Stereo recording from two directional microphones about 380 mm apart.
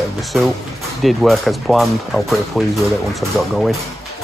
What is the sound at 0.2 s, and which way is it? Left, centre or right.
Speech, centre.